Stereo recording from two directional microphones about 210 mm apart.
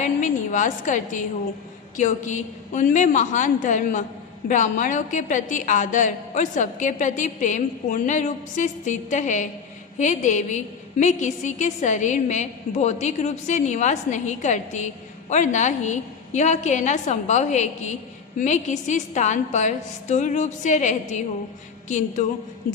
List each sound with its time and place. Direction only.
0.0 s a woman's voice: 35° left (ahead or behind)